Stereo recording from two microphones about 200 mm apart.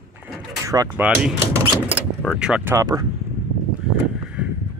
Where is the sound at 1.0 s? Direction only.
5° right (ahead or behind).